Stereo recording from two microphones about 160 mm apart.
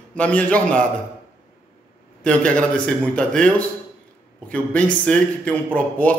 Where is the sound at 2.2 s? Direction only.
5° left (ahead or behind).